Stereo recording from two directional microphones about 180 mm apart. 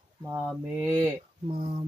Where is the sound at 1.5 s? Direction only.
30° right (ahead or behind).